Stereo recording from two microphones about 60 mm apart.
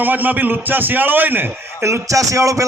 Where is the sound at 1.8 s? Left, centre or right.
Right.